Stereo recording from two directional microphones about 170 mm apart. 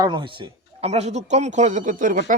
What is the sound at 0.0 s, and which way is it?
A man's voice, 25° right (ahead or behind).